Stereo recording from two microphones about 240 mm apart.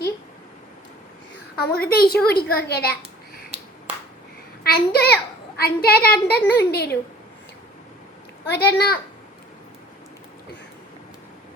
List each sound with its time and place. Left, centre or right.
1.5 s a child's voice: left
4.6 s a child's voice: left
8.4 s a child's voice: left